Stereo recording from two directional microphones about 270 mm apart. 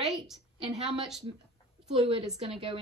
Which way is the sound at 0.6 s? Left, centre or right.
Right.